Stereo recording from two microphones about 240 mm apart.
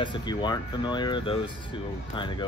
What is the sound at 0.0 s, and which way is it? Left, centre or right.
Speech, centre.